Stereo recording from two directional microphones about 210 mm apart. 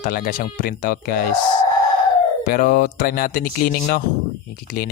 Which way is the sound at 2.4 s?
45° left (ahead or behind).